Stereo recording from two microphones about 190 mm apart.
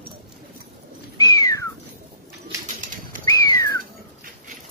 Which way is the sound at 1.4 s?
15° left (ahead or behind).